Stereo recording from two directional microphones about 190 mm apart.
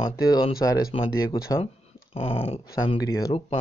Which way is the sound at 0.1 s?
20° left (ahead or behind).